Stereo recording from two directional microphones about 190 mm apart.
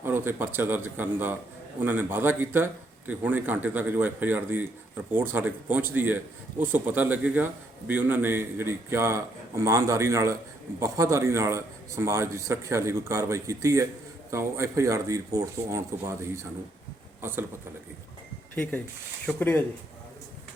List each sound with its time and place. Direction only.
0.0 s a man's voice: 10° right (ahead or behind)
18.5 s speech: 10° left (ahead or behind)